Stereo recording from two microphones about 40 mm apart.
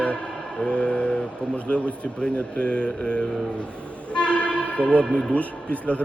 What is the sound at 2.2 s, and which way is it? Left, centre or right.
Speech, left.